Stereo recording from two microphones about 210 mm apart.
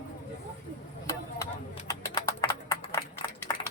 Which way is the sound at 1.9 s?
15° left (ahead or behind).